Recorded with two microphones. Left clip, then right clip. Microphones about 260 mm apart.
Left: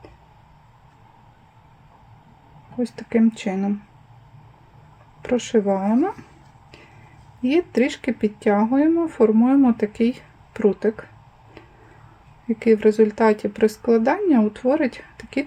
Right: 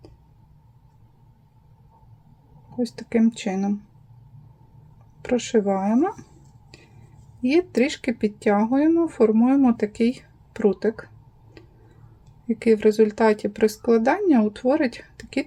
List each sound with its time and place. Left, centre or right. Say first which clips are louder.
2.7 s speech: left 2 dB; centre
5.2 s speech: left 1 dB; centre
7.4 s speech: left 1 dB; centre
12.5 s speech: left 2 dB; centre